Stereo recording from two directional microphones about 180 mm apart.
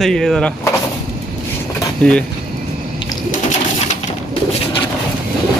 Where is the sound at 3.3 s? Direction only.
45° left (ahead or behind).